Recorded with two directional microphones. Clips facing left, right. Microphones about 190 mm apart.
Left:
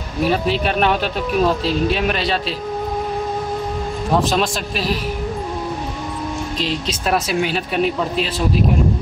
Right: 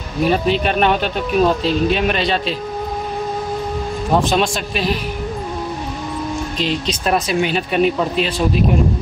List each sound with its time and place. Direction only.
0.2 s speech: 5° left (ahead or behind)
4.1 s speech: centre (ahead or behind)
6.6 s speech: centre (ahead or behind)